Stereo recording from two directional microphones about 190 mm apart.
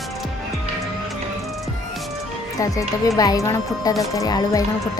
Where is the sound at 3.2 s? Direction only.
20° left (ahead or behind).